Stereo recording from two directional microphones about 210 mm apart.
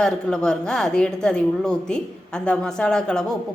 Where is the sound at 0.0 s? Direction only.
5° left (ahead or behind).